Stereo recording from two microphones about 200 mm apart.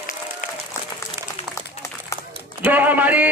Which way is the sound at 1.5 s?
15° left (ahead or behind).